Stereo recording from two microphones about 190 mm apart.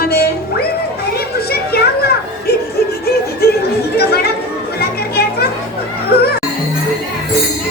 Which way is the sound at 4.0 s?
55° left (ahead or behind).